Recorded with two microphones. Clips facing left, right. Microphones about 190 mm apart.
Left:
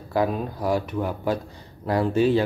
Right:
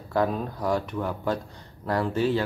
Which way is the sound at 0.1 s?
10° left (ahead or behind).